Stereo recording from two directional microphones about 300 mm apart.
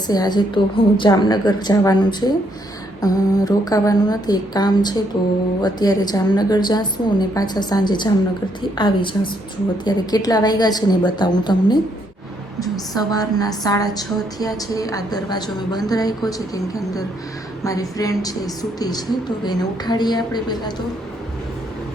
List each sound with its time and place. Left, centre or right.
0.1 s a woman's voice: centre
12.9 s a woman's voice: centre
17.6 s a woman's voice: centre